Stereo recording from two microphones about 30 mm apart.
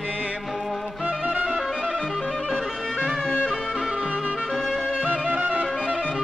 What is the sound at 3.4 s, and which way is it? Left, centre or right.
Music, centre.